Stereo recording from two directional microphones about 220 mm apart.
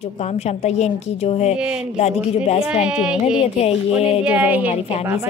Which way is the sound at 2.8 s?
5° right (ahead or behind).